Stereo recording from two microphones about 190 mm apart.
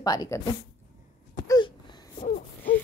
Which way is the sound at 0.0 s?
20° left (ahead or behind).